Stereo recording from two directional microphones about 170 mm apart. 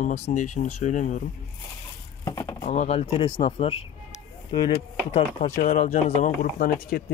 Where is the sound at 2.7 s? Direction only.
40° left (ahead or behind).